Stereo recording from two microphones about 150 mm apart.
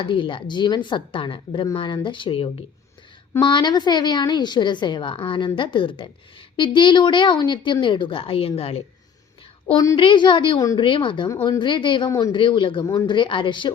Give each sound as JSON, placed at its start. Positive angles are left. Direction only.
{"t": 0.0, "sound": "a woman's voice", "side_deg": 35}
{"t": 10.0, "sound": "a woman's voice", "side_deg": 35}
{"t": 10.6, "sound": "speech", "side_deg": 25}
{"t": 10.8, "sound": "a woman's voice", "side_deg": 35}